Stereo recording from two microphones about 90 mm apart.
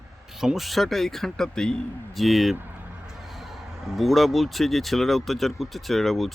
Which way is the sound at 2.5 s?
20° right (ahead or behind).